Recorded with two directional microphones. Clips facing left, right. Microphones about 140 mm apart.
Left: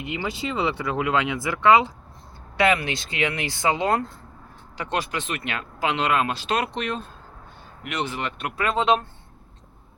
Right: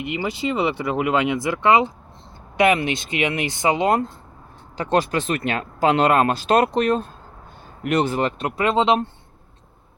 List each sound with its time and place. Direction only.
0.2 s speech: 20° right (ahead or behind)
4.8 s speech: 35° right (ahead or behind)